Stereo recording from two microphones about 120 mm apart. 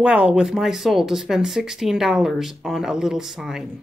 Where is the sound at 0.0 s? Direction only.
10° right (ahead or behind).